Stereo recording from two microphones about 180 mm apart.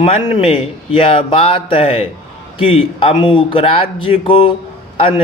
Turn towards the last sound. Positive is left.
turn(degrees=30)  # may be behind; listen again after turning